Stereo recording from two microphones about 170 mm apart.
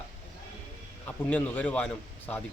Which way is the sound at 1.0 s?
10° left (ahead or behind).